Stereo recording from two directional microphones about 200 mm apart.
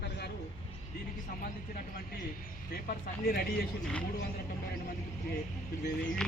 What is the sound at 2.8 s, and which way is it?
Speech, 45° left (ahead or behind).